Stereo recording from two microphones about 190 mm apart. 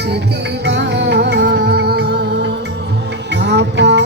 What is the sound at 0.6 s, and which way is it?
Music, 65° right (ahead or behind).